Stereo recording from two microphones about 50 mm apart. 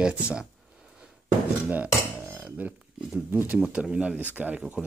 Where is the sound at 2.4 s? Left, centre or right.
Right.